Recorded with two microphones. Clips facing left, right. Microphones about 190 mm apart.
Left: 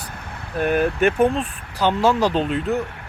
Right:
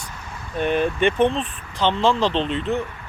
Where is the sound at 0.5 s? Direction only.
5° left (ahead or behind).